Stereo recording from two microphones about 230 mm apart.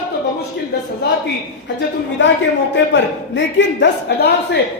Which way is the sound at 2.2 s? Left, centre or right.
Left.